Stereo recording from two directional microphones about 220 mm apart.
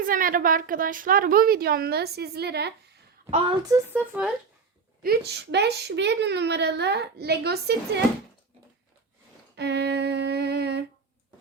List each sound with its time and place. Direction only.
0.0 s a woman's voice: 40° right (ahead or behind)
3.2 s a woman's voice: 25° right (ahead or behind)
3.7 s speech: 10° right (ahead or behind)
5.0 s speech: 45° right (ahead or behind)
9.6 s a sound: 50° right (ahead or behind)